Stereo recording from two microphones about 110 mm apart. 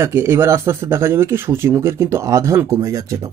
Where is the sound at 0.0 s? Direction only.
25° right (ahead or behind).